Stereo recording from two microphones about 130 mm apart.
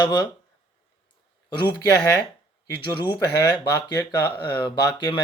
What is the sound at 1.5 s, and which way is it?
Speech, 35° left (ahead or behind).